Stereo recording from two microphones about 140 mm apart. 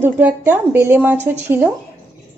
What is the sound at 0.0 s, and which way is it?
A woman's voice, 15° right (ahead or behind).